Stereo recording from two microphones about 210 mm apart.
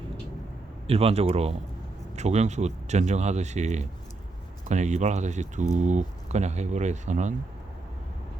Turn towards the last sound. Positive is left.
turn(degrees=-35)  # may be behind; listen again after turning